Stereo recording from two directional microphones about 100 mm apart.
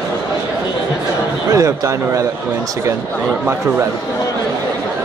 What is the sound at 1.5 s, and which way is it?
Speech, 30° right (ahead or behind).